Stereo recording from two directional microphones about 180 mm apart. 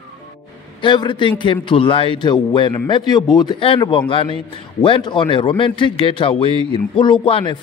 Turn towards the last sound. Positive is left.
turn(degrees=30)  # may be behind; listen again after turning